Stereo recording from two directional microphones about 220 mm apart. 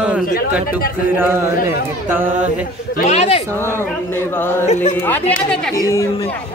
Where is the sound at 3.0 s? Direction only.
30° left (ahead or behind).